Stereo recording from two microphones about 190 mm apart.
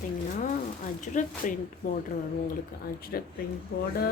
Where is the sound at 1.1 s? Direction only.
40° left (ahead or behind).